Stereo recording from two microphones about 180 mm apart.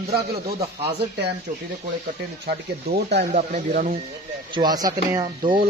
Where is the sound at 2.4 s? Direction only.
65° right (ahead or behind).